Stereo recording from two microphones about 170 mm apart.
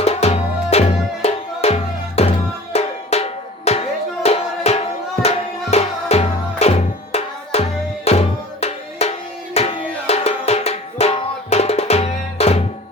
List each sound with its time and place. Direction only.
0.0 s music: 40° left (ahead or behind)
2.7 s drum: 35° left (ahead or behind)
9.6 s music: 40° left (ahead or behind)